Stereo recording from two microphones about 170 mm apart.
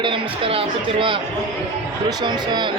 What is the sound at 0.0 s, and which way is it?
Speech, 30° right (ahead or behind).